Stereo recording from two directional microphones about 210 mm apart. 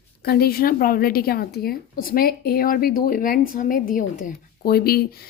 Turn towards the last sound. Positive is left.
turn(degrees=45)  # may be behind; listen again after turning